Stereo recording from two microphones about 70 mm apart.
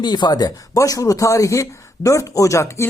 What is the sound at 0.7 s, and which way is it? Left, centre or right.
Speech, left.